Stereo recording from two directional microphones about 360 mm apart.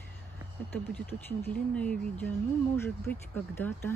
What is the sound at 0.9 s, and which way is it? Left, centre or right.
Speech, centre.